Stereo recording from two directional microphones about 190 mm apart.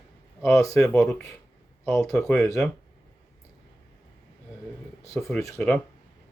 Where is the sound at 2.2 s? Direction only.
Centre (ahead or behind).